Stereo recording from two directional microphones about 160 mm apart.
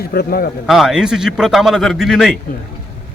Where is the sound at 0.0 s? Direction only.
75° left (ahead or behind).